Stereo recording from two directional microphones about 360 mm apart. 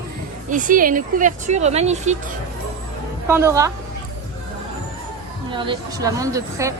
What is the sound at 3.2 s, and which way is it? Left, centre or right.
Speech, centre.